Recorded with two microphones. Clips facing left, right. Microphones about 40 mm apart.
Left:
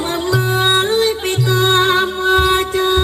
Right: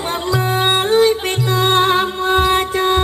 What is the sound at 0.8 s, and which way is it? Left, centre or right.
Music, left.